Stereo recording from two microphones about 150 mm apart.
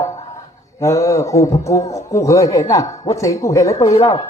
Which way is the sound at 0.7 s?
20° left (ahead or behind).